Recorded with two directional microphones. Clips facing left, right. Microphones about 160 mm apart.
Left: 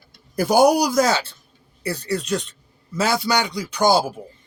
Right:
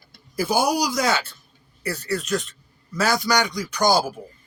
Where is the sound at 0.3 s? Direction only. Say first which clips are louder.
Left 6 dB; 65° left (ahead or behind).